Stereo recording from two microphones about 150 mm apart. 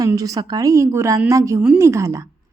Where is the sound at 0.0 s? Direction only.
25° right (ahead or behind).